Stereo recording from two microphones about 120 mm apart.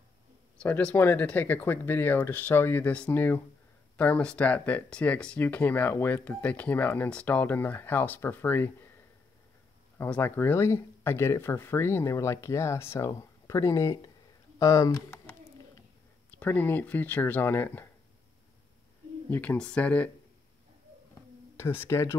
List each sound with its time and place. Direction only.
0.6 s speech: 10° left (ahead or behind)
9.9 s speech: 15° left (ahead or behind)
14.6 s a sound: 25° left (ahead or behind)
16.3 s speech: 15° left (ahead or behind)
19.3 s speech: 10° left (ahead or behind)
21.5 s speech: 20° left (ahead or behind)